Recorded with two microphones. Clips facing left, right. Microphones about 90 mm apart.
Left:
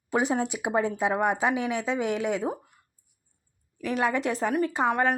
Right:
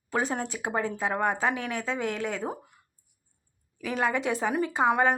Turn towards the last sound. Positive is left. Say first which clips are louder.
# right 1 dB
turn(degrees=-10)  # may be behind; listen again after turning